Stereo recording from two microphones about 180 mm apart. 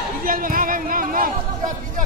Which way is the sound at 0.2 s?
50° right (ahead or behind).